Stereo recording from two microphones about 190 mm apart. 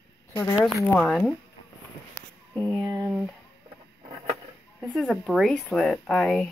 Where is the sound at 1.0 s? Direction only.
Centre (ahead or behind).